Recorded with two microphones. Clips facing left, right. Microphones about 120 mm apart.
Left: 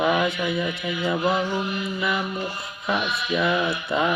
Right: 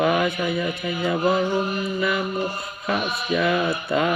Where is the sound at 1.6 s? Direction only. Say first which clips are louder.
Right 3 dB; 40° right (ahead or behind).